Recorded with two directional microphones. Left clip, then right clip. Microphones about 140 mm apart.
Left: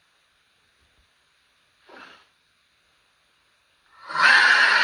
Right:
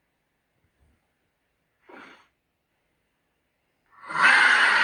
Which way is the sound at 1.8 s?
35° right (ahead or behind).